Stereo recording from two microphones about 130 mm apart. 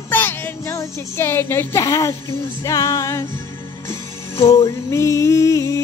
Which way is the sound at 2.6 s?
25° left (ahead or behind).